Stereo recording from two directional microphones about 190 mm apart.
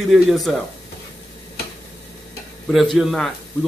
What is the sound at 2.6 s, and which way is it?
Speech, centre (ahead or behind).